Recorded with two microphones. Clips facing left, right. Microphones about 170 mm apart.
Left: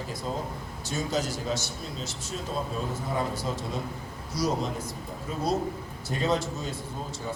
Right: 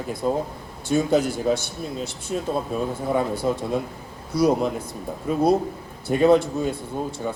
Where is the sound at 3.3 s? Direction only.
55° right (ahead or behind).